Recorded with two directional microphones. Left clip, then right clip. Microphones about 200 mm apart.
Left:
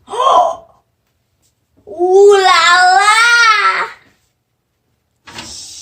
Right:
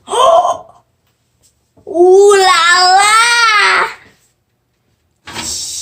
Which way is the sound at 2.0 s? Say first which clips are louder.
Even; 50° right (ahead or behind).